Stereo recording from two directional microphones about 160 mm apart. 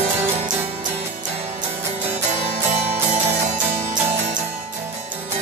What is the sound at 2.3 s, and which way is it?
Music, 45° right (ahead or behind).